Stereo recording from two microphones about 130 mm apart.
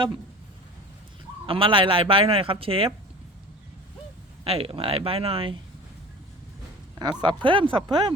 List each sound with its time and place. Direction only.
1.5 s speech: 45° right (ahead or behind)
4.4 s speech: 45° right (ahead or behind)
7.0 s speech: 35° right (ahead or behind)